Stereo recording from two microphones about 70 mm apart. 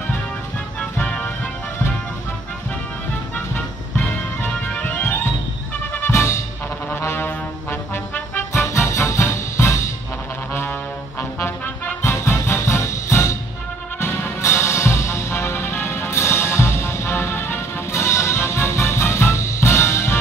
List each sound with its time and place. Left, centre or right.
0.7 s music: centre
3.5 s music: left
7.0 s brass instrument: left
11.1 s brass instrument: left
14.0 s music: left